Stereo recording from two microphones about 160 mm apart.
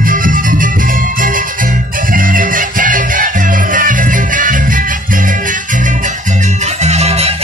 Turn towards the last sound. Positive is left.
turn(degrees=-40)  # may be behind; listen again after turning